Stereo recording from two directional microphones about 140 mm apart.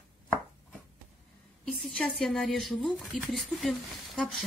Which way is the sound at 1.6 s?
5° left (ahead or behind).